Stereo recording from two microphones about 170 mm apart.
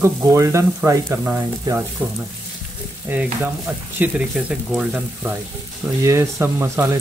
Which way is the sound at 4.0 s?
5° right (ahead or behind).